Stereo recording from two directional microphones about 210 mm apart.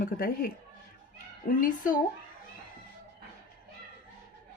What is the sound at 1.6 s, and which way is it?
Speech, 40° left (ahead or behind).